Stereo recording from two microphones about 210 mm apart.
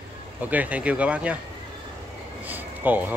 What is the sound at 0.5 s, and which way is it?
Speech, 5° right (ahead or behind).